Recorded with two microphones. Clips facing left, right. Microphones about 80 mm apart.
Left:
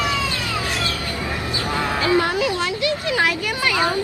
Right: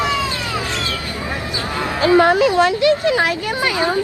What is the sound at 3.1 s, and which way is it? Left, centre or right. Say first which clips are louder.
Speech: right 4 dB; right.